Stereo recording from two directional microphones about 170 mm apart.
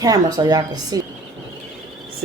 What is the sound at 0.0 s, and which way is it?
Speech, 20° right (ahead or behind).